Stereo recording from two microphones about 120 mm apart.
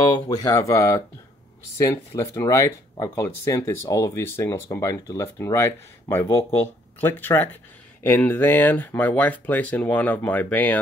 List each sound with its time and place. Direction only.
0.5 s speech: 25° left (ahead or behind)